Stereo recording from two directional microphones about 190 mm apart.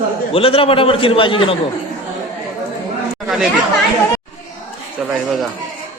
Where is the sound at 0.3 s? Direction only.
30° left (ahead or behind).